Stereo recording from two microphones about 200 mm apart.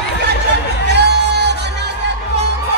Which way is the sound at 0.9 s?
60° right (ahead or behind).